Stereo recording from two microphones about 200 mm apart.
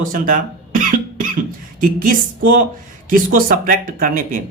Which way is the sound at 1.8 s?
45° right (ahead or behind).